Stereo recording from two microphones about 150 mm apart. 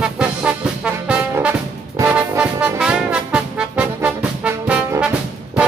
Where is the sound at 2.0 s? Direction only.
10° right (ahead or behind).